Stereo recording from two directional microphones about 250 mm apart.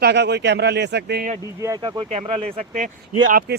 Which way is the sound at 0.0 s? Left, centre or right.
Right.